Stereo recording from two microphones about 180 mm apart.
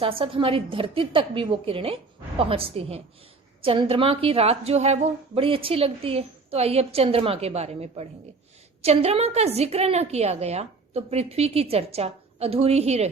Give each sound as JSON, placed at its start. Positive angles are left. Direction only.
{"t": 0.0, "sound": "a woman's voice", "side_deg": -30}